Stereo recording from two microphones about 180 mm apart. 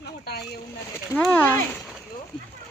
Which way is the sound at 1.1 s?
10° left (ahead or behind).